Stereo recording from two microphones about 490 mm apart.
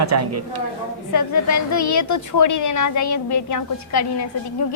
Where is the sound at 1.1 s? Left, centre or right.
Left.